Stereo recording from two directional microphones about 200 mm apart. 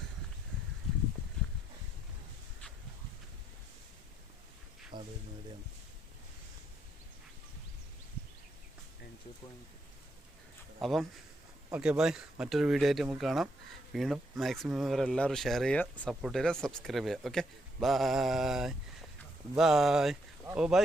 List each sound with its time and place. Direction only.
4.9 s music: 20° right (ahead or behind)
10.8 s speech: centre (ahead or behind)